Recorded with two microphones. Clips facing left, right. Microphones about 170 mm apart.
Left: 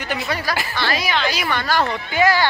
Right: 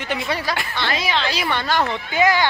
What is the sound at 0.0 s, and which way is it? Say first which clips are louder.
Speech: even; 25° right (ahead or behind).